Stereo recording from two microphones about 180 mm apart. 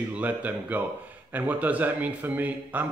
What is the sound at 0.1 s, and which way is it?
A man's voice, 10° right (ahead or behind).